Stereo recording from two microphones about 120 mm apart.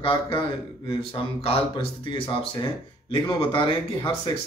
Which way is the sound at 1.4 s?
45° left (ahead or behind).